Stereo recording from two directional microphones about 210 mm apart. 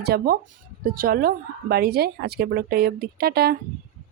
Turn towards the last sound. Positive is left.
turn(degrees=-50)  # may be behind; listen again after turning